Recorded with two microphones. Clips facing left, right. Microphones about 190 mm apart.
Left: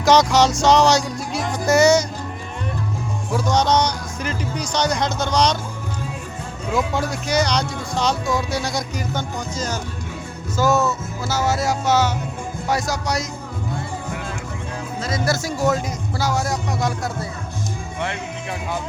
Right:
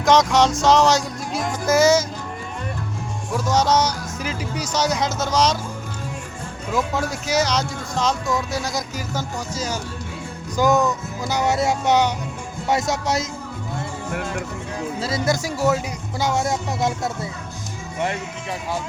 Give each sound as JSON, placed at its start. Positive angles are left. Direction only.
{"t": 0.0, "sound": "music", "side_deg": 0}
{"t": 3.3, "sound": "speech", "side_deg": -5}
{"t": 6.7, "sound": "speech", "side_deg": 0}
{"t": 10.6, "sound": "music", "side_deg": -15}
{"t": 11.6, "sound": "a man's voice", "side_deg": -20}
{"t": 15.0, "sound": "music", "side_deg": -25}
{"t": 16.1, "sound": "a man's voice", "side_deg": -20}